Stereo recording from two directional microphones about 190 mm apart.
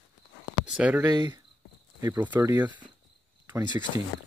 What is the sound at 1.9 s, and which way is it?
Speech, 10° right (ahead or behind).